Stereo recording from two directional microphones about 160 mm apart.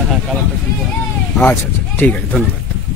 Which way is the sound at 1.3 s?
10° left (ahead or behind).